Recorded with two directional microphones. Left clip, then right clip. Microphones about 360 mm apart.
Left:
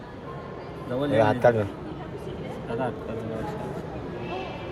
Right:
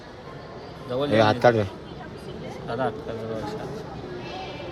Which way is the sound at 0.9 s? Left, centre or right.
Right.